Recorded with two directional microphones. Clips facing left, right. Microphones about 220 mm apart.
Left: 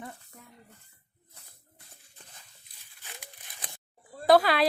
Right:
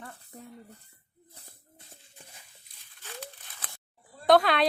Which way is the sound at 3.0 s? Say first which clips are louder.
Right 7 dB; 15° left (ahead or behind).